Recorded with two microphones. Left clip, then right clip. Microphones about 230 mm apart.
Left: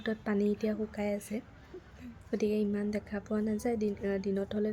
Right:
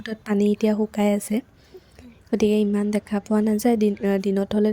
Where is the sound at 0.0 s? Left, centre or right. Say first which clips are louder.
Right 8 dB; right.